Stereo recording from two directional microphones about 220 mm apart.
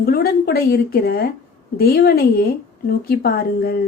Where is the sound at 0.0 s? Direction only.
45° left (ahead or behind).